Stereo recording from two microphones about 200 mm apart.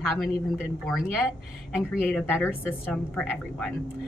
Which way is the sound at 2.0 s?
10° left (ahead or behind).